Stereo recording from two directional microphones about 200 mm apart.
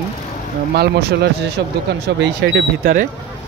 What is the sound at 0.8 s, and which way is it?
Speech, 55° right (ahead or behind).